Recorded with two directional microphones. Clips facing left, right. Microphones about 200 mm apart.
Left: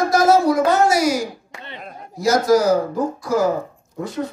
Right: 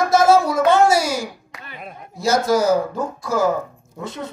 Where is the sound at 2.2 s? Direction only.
25° right (ahead or behind).